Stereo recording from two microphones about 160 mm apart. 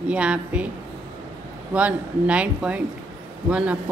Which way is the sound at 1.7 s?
10° right (ahead or behind).